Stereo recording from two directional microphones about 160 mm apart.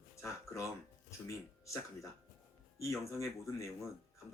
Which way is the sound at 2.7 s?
20° left (ahead or behind).